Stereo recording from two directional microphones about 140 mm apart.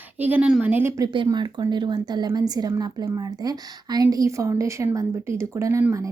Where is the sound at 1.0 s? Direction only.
35° right (ahead or behind).